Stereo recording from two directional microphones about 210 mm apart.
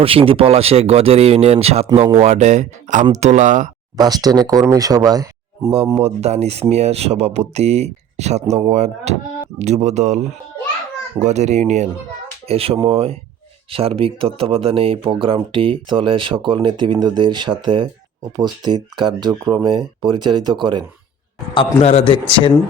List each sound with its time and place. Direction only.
0.0 s speech: 25° right (ahead or behind)
3.9 s speech: 20° right (ahead or behind)
5.7 s speech: 30° right (ahead or behind)
21.8 s speech: 30° left (ahead or behind)